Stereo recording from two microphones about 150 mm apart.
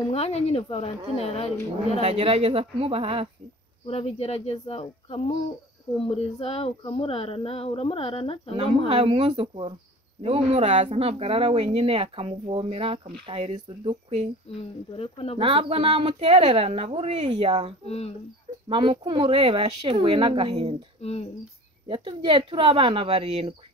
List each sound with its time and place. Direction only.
0.1 s speech: 40° left (ahead or behind)
1.9 s speech: 45° right (ahead or behind)
3.8 s speech: 40° left (ahead or behind)
8.6 s speech: 40° right (ahead or behind)
14.6 s speech: 40° left (ahead or behind)
15.3 s speech: 40° right (ahead or behind)
17.8 s speech: 45° left (ahead or behind)
18.7 s speech: 35° right (ahead or behind)
21.0 s speech: 45° left (ahead or behind)
21.8 s speech: 35° right (ahead or behind)